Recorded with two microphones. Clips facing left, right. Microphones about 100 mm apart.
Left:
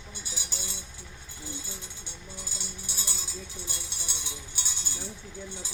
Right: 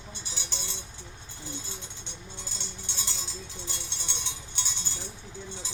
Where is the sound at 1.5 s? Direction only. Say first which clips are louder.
Right 1 dB; 10° left (ahead or behind).